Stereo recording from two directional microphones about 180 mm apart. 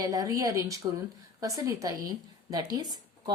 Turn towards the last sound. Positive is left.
turn(degrees=-20)  # may be behind; listen again after turning